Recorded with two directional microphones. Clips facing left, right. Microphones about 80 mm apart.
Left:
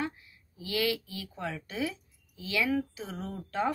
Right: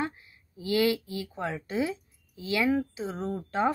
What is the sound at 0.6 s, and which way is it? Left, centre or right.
Speech, right.